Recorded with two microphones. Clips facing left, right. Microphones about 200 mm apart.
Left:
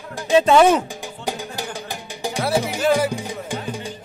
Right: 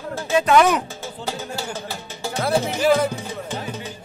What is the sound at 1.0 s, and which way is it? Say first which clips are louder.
Music: left 1 dB; 15° left (ahead or behind).